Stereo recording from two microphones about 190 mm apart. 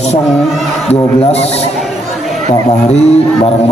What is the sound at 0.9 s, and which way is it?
Speech, 35° left (ahead or behind).